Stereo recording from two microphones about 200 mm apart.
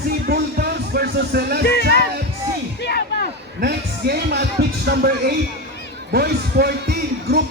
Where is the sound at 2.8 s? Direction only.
55° left (ahead or behind).